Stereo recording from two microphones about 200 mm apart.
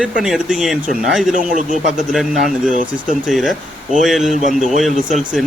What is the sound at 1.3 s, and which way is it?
Speech, 40° right (ahead or behind).